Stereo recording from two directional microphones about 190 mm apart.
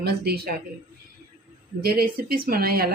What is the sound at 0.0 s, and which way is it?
Speech, 55° right (ahead or behind).